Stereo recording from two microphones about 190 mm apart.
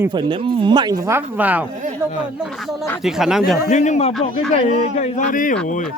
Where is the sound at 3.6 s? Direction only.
40° left (ahead or behind).